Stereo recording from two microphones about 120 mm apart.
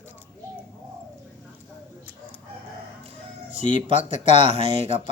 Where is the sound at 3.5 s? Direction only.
90° left.